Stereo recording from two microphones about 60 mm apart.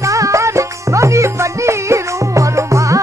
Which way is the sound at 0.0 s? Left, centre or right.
Right.